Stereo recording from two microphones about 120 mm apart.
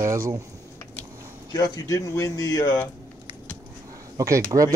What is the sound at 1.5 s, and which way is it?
Speech, 30° left (ahead or behind).